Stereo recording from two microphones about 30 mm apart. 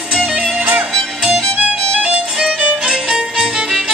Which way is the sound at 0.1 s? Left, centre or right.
Centre.